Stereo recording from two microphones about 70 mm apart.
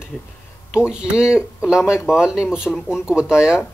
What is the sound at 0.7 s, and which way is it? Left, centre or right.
Speech, centre.